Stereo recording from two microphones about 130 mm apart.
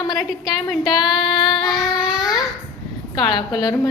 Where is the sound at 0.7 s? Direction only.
5° right (ahead or behind).